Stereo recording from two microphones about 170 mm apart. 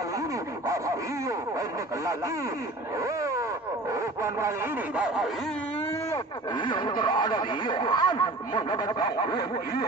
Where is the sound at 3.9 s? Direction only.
15° right (ahead or behind).